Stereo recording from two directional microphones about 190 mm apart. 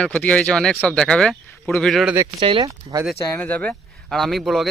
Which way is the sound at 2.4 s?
25° right (ahead or behind).